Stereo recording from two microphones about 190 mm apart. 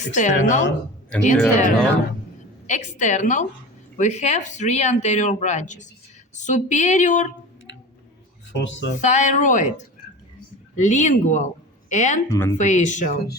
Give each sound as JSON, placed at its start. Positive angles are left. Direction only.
{"t": 0.0, "sound": "speech", "side_deg": 40}
{"t": 8.5, "sound": "speech", "side_deg": 75}
{"t": 9.0, "sound": "speech", "side_deg": 40}
{"t": 12.3, "sound": "speech", "side_deg": 20}
{"t": 12.5, "sound": "speech", "side_deg": 40}